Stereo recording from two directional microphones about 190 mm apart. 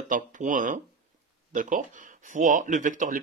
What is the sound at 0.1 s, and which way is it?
Speech, 40° right (ahead or behind).